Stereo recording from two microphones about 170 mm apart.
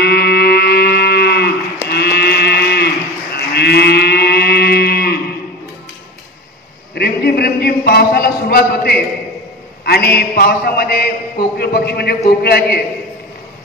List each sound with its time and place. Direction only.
0.0 s music: 70° left (ahead or behind)
1.9 s moo: 70° left (ahead or behind)
3.3 s livestock: 70° left (ahead or behind)
7.0 s a sound: 70° left (ahead or behind)
9.8 s a man's voice: 70° left (ahead or behind)